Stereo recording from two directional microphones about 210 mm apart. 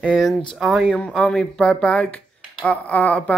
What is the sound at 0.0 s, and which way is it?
Speech, centre (ahead or behind).